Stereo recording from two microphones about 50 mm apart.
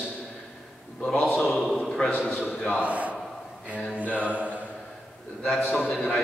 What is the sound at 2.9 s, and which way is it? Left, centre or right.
Speech, right.